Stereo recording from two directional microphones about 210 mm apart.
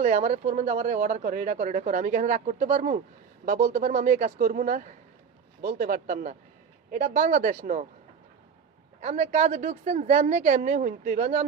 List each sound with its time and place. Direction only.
0.0 s speech: 35° right (ahead or behind)
9.0 s speech: 35° right (ahead or behind)